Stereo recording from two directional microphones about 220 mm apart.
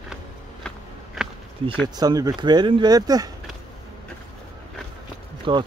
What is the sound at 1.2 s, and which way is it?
Insect, centre (ahead or behind).